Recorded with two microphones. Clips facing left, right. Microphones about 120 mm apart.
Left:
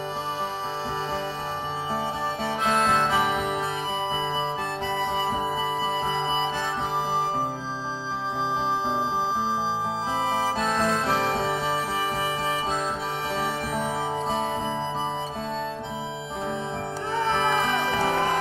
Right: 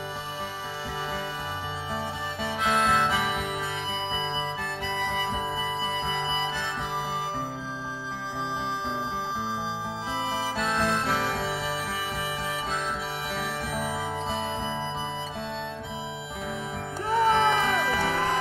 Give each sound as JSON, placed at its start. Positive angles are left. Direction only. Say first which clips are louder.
{"t": 2.6, "sound": "music", "louder": "left 1 dB", "side_deg": 40}
{"t": 4.8, "sound": "harmonica", "louder": "left 3 dB", "side_deg": 20}
{"t": 6.0, "sound": "harmonica", "louder": "left 4 dB", "side_deg": 55}
{"t": 10.2, "sound": "music", "louder": "left 3 dB", "side_deg": 50}
{"t": 17.6, "sound": "music", "louder": "left 1 dB", "side_deg": 35}